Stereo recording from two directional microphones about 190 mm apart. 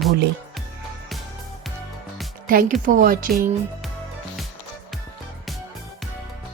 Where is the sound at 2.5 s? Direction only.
45° right (ahead or behind).